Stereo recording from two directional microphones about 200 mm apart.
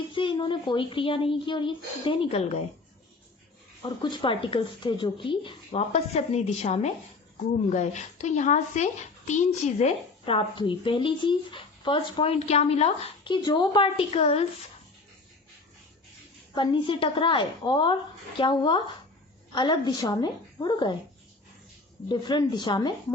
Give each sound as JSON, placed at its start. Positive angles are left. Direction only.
{"t": 0.1, "sound": "a woman's voice", "side_deg": 25}
{"t": 3.8, "sound": "a woman's voice", "side_deg": 25}
{"t": 16.6, "sound": "a woman's voice", "side_deg": 25}
{"t": 22.1, "sound": "a woman's voice", "side_deg": 20}